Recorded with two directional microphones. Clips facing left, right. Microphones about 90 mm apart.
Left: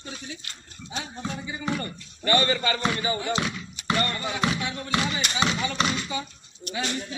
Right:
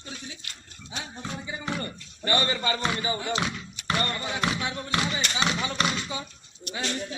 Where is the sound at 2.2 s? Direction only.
20° right (ahead or behind).